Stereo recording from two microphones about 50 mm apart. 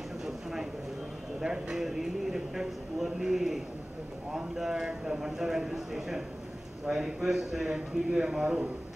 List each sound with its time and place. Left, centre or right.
1.4 s speech: centre